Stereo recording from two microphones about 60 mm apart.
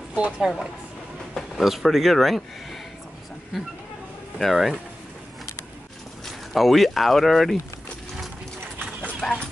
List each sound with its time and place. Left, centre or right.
0.1 s a woman's voice: centre
1.3 s speech: centre
4.4 s speech: centre
6.5 s speech: centre
9.2 s speech: centre